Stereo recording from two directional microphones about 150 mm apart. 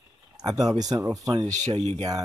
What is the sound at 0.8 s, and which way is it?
Speech, 25° right (ahead or behind).